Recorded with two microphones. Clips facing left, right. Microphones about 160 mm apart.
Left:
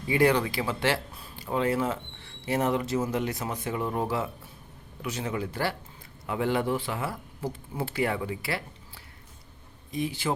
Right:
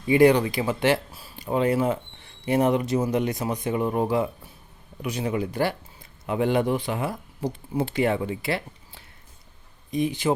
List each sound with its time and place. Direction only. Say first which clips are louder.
0.1 s speech: right 6 dB; 15° right (ahead or behind)